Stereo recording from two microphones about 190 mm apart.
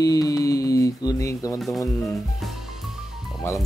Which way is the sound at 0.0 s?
20° left (ahead or behind).